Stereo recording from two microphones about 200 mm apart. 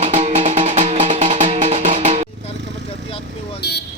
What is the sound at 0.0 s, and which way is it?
Music, 35° right (ahead or behind).